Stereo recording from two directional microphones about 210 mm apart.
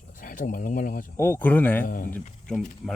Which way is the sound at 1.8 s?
40° left (ahead or behind).